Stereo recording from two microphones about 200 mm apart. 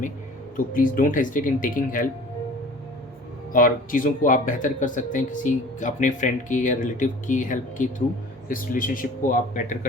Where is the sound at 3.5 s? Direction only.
45° left (ahead or behind).